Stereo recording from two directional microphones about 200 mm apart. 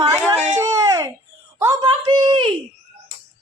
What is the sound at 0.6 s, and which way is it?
A woman's voice, 20° right (ahead or behind).